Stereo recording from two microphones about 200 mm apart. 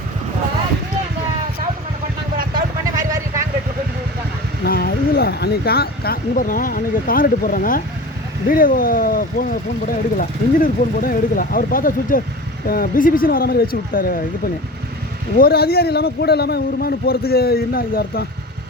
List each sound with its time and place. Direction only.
2.4 s vehicle: 45° right (ahead or behind)
4.6 s a man's voice: 50° left (ahead or behind)